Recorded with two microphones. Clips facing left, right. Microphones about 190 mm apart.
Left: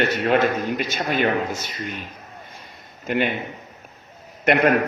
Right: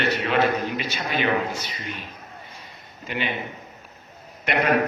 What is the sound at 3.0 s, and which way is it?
Speech, 50° left (ahead or behind).